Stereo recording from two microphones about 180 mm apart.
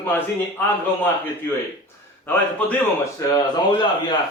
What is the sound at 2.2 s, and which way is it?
Speech, 10° left (ahead or behind).